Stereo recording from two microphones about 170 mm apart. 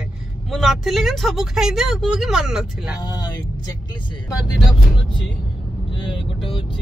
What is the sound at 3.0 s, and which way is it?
Speech, 25° left (ahead or behind).